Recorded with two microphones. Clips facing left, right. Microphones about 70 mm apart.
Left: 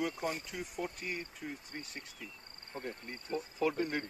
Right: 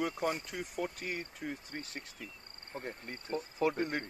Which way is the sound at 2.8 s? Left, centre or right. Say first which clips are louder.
Left 1 dB; right.